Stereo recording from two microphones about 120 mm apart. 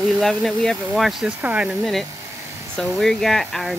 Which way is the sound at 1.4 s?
10° right (ahead or behind).